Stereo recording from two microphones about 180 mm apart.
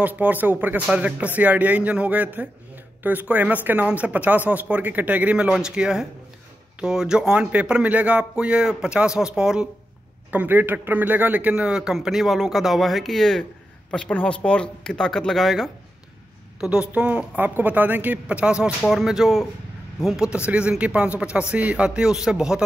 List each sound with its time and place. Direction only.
0.0 s a man's voice: 10° right (ahead or behind)